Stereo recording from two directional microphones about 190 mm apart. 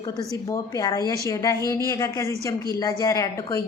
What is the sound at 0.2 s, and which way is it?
A woman's voice, 20° left (ahead or behind).